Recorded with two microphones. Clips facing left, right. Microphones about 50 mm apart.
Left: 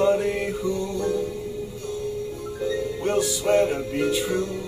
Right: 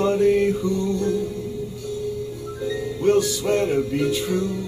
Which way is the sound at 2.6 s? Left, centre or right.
Left.